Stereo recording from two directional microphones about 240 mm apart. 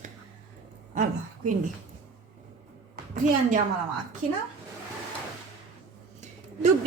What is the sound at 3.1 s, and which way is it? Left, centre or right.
Speech, right.